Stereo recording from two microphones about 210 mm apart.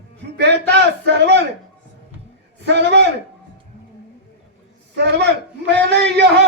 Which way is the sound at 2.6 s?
55° right (ahead or behind).